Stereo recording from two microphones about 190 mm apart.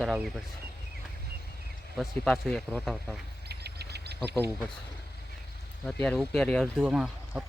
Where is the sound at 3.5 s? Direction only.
60° right (ahead or behind).